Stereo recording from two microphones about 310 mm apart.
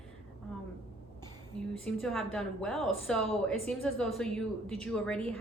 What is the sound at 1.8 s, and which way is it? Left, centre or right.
A woman's voice, centre.